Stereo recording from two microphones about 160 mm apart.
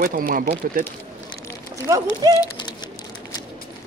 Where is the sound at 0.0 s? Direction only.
65° right (ahead or behind).